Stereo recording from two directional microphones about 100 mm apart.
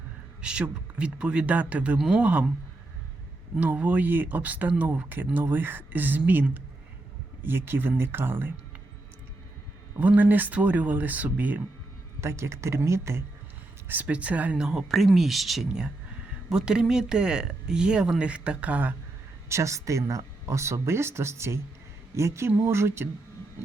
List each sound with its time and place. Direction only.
0.4 s speech: 10° right (ahead or behind)
3.6 s speech: 15° right (ahead or behind)
10.0 s speech: 15° right (ahead or behind)
12.2 s speech: 30° right (ahead or behind)
13.8 s speech: 15° right (ahead or behind)
19.5 s speech: 30° right (ahead or behind)